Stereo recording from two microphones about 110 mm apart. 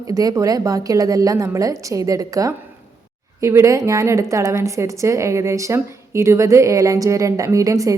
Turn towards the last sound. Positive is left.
turn(degrees=-30)  # may be behind; listen again after turning